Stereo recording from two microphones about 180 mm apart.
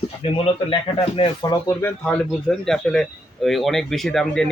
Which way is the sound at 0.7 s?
30° left (ahead or behind).